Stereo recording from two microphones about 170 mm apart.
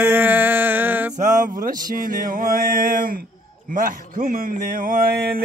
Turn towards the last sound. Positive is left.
turn(degrees=-65)  # may be behind; listen again after turning